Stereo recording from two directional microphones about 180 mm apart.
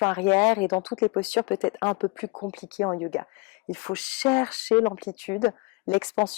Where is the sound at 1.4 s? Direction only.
20° left (ahead or behind).